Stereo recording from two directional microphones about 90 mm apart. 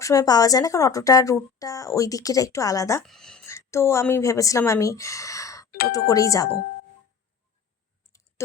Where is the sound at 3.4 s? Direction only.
30° left (ahead or behind).